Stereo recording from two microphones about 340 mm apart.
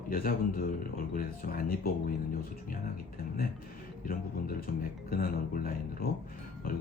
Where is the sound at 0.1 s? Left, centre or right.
Left.